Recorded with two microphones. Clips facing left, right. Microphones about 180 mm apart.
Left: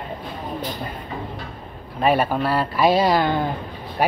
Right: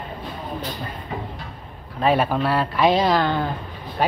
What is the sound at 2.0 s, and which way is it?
Speech, centre (ahead or behind).